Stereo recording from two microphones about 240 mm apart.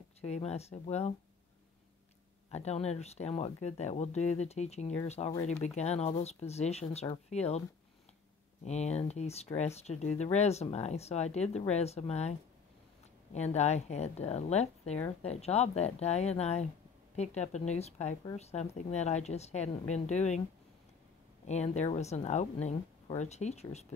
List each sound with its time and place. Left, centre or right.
0.2 s speech: left
2.5 s speech: left
5.3 s speech: centre
5.6 s speech: left
8.6 s speech: left
21.5 s speech: left